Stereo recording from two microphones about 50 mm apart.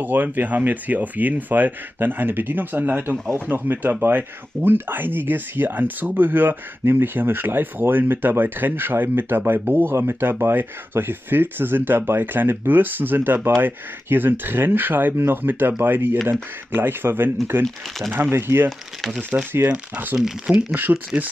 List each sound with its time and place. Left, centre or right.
0.0 s speech: right
20.5 s speech: centre
20.9 s speech: right